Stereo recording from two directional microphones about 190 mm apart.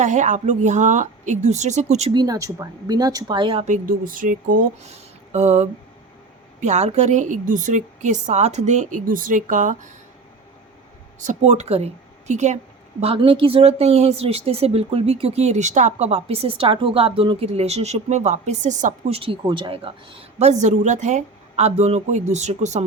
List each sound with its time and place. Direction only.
0.0 s a woman's voice: 40° right (ahead or behind)
2.1 s a woman's voice: 20° right (ahead or behind)
3.8 s a woman's voice: 45° right (ahead or behind)
11.2 s a woman's voice: 40° right (ahead or behind)